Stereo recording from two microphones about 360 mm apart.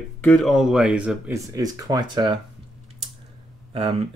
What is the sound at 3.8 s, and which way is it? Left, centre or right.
Speech, centre.